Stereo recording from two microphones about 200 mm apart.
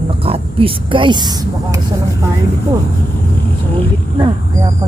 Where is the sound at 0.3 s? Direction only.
25° right (ahead or behind).